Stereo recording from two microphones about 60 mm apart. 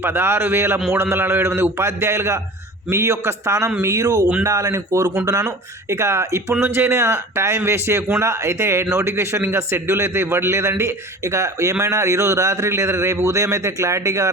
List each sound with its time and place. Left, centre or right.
0.0 s speech: right
5.2 s speech: right
5.9 s speech: right